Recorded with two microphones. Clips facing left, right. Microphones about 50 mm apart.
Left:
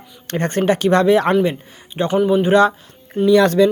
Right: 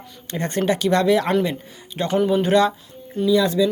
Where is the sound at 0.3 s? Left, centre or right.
Left.